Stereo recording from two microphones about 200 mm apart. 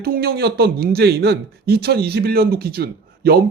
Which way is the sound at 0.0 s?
50° right (ahead or behind).